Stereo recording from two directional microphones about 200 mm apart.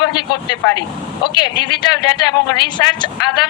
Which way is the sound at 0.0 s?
20° left (ahead or behind).